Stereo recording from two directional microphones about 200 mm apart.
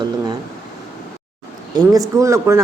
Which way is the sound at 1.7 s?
20° right (ahead or behind).